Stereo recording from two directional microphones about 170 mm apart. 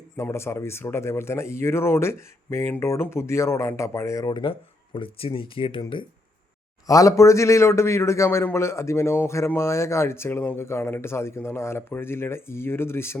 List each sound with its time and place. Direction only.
0.2 s a man's voice: 15° left (ahead or behind)